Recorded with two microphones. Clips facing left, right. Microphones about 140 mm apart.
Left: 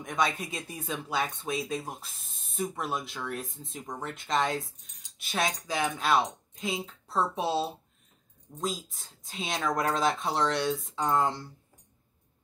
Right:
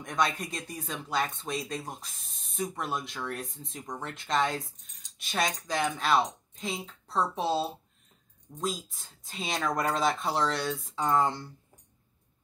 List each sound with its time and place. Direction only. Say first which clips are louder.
0.0 s speech: even; centre (ahead or behind)